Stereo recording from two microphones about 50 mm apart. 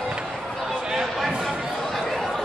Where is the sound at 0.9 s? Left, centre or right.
Centre.